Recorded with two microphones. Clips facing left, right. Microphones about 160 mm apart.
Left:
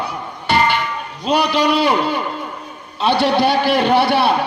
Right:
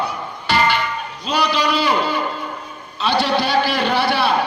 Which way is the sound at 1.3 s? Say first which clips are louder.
Left 4 dB; 55° left (ahead or behind).